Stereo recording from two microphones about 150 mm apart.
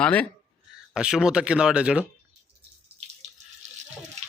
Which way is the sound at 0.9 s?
5° right (ahead or behind).